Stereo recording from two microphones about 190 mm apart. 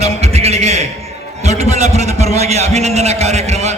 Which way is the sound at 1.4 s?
35° right (ahead or behind).